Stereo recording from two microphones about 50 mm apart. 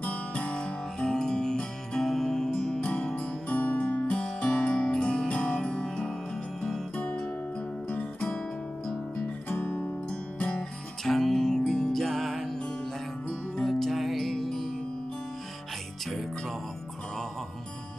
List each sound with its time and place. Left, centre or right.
0.0 s guitar: left; by 2.8 s centre
2.8 s music: left
7.0 s music: left
9.5 s music: left
10.0 s music: left
11.1 s music: centre
13.7 s music: centre
16.1 s music: centre